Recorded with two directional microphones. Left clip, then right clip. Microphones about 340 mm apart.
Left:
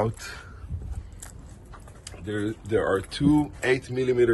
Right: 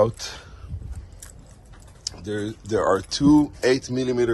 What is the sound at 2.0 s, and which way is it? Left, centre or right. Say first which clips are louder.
Typing: right 3 dB; right.